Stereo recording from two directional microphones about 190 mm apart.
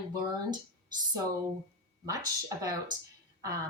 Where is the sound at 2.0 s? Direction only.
20° right (ahead or behind).